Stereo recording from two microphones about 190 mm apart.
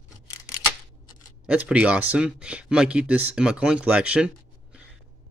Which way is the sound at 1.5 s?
5° right (ahead or behind).